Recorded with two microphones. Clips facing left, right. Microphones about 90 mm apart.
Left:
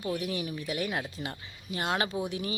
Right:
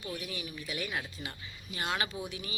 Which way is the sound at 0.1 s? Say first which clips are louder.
Left 8 dB; 55° left (ahead or behind).